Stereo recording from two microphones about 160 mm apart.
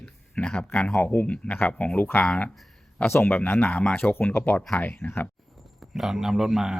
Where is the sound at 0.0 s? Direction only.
5° left (ahead or behind).